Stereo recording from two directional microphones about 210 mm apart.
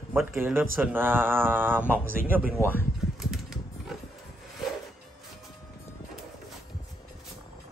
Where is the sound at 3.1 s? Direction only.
Centre (ahead or behind).